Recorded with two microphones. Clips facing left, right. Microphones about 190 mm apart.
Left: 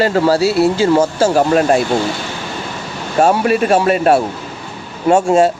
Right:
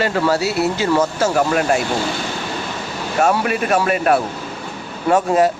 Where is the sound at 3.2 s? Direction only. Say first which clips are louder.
Left 5 dB; 30° left (ahead or behind).